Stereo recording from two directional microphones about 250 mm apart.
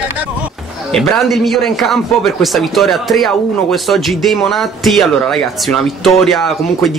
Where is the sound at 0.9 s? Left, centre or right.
Centre.